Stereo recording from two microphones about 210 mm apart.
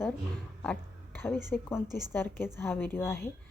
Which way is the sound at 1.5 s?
5° left (ahead or behind).